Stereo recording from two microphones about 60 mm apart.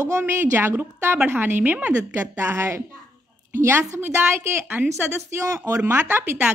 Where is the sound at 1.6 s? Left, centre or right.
Right.